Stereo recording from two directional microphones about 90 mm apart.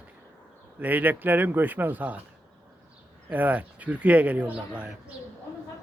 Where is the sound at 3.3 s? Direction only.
20° right (ahead or behind).